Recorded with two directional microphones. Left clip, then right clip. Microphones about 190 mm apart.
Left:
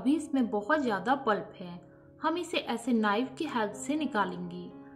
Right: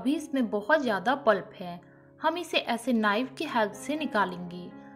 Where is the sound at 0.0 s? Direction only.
15° right (ahead or behind).